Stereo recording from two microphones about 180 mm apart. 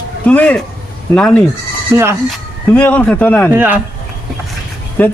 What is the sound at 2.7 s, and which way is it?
Speech, 10° left (ahead or behind).